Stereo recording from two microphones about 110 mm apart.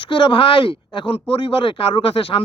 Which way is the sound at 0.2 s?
50° left (ahead or behind).